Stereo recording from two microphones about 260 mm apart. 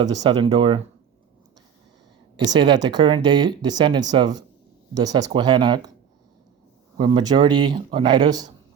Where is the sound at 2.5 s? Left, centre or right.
Centre.